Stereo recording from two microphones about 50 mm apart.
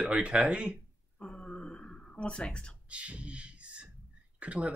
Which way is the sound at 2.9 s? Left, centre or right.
Right.